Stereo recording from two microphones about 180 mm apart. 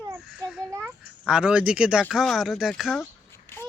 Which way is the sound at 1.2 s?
5° right (ahead or behind).